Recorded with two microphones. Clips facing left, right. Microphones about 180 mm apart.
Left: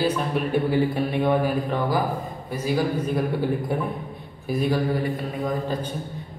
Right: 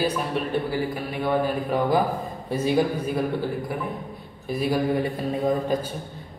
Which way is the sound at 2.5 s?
25° right (ahead or behind).